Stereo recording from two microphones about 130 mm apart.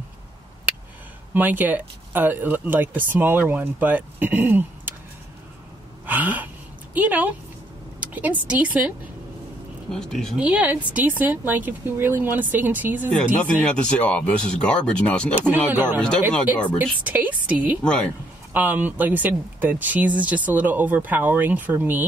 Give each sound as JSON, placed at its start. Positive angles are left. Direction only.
{"t": 1.3, "sound": "speech", "side_deg": -15}
{"t": 6.0, "sound": "a sound", "side_deg": -10}
{"t": 8.0, "sound": "speech", "side_deg": -10}
{"t": 9.8, "sound": "speech", "side_deg": 5}
{"t": 10.3, "sound": "speech", "side_deg": -10}
{"t": 13.4, "sound": "speech", "side_deg": 10}
{"t": 15.7, "sound": "speech", "side_deg": -15}